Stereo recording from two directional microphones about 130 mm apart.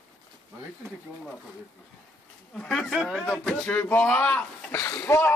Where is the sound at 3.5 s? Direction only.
15° left (ahead or behind).